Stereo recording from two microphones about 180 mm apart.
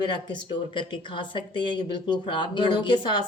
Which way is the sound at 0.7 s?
30° left (ahead or behind).